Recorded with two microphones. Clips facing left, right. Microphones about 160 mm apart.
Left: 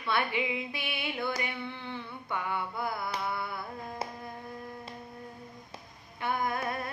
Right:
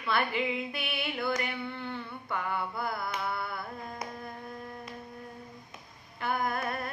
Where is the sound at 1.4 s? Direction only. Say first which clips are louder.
Right 2 dB; centre (ahead or behind).